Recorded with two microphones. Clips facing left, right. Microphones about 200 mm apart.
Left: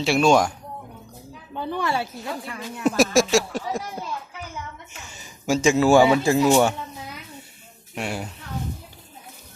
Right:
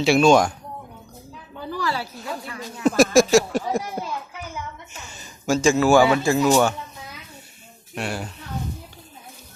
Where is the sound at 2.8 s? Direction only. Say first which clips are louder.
Right 3 dB; 5° left (ahead or behind).